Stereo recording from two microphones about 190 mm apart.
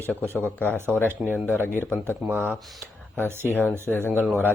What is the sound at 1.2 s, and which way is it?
Speech, 10° right (ahead or behind).